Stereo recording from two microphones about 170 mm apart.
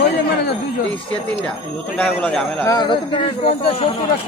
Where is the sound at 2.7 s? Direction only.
25° left (ahead or behind).